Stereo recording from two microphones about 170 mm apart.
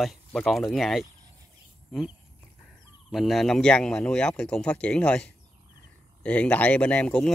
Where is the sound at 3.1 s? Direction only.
Centre (ahead or behind).